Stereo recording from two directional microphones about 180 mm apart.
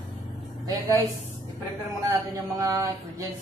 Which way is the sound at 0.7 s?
20° right (ahead or behind).